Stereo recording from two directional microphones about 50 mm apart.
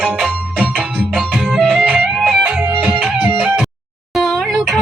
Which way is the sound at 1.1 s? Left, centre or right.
Centre.